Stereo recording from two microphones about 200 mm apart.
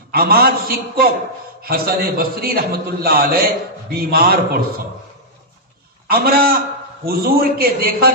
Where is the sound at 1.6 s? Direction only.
50° right (ahead or behind).